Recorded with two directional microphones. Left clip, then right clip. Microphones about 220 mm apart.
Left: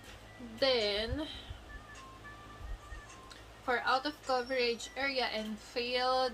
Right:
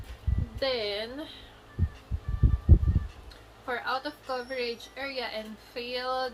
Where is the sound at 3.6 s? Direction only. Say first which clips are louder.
Even; 15° left (ahead or behind).